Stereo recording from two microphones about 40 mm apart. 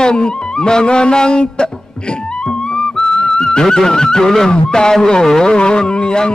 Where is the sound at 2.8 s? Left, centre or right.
Left.